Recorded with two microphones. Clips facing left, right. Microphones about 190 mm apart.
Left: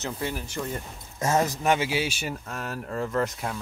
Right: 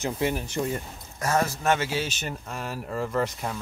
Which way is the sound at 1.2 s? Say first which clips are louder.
Left 1 dB; 20° left (ahead or behind).